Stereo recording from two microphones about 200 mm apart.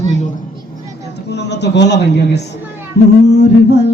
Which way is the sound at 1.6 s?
60° left (ahead or behind).